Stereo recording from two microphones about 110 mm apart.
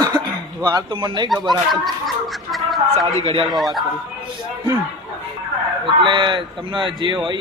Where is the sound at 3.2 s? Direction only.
60° right (ahead or behind).